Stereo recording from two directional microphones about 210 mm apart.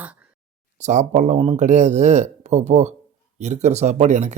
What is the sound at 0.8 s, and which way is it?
Speech, 35° right (ahead or behind).